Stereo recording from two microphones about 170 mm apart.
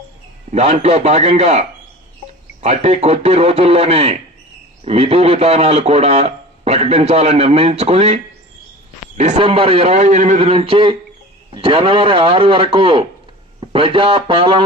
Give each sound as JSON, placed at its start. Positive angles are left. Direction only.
{"t": 0.5, "sound": "a man's voice", "side_deg": -40}